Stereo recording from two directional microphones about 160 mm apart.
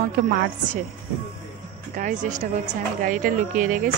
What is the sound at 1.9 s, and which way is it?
A woman's voice, 55° right (ahead or behind).